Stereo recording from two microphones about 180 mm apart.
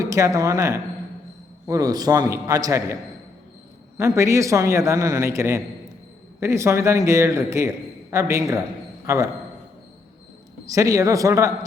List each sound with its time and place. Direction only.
0.0 s a man's voice: 20° right (ahead or behind)
10.7 s a man's voice: 15° right (ahead or behind)